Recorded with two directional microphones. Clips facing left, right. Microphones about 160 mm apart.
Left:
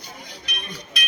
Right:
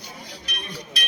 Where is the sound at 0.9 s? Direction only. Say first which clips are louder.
Left 2 dB; 35° right (ahead or behind).